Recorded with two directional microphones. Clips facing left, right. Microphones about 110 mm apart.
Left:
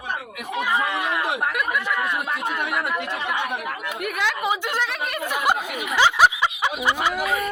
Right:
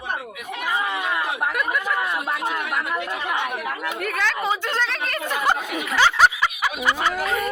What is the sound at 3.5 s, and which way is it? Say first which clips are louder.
A woman's voice: right 1 dB; 15° left (ahead or behind).